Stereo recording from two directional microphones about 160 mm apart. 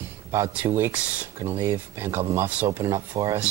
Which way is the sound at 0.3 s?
15° right (ahead or behind).